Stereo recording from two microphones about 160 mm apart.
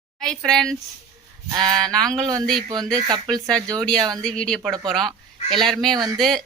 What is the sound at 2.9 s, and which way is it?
Speech, 25° right (ahead or behind).